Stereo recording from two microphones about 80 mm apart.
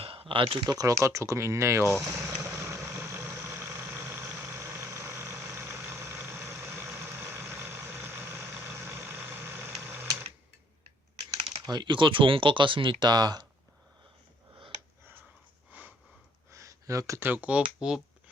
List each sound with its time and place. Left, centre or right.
0.3 s speech: right
0.7 s speech: right
0.9 s speech: right
2.1 s vehicle: right
11.6 s speech: right
15.7 s sniff: right
16.5 s a sound: right
17.2 s speech: right